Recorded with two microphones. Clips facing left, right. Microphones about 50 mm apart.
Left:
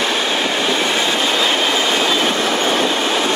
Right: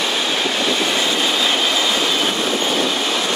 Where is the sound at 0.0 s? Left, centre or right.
Left.